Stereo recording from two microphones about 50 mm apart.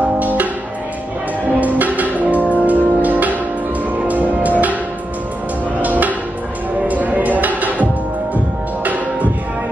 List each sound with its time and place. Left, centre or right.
0.2 s music: right
1.6 s music: right
5.8 s music: right